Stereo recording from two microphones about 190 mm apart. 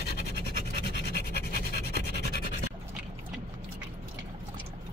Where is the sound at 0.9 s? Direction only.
60° left (ahead or behind).